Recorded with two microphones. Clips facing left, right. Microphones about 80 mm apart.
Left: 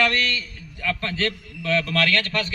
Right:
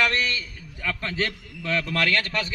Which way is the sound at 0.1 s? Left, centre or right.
Centre.